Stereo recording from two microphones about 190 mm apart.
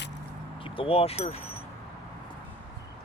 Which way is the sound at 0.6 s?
30° left (ahead or behind).